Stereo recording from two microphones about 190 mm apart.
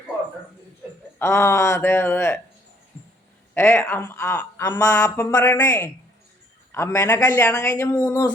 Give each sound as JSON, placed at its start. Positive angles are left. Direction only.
{"t": 1.2, "sound": "speech", "side_deg": 15}
{"t": 3.5, "sound": "speech", "side_deg": 10}